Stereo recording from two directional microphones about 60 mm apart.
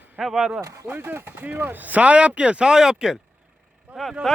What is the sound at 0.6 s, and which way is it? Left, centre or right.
Speech, right.